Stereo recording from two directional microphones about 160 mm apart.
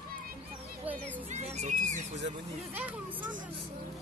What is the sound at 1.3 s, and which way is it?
Speech, 45° right (ahead or behind).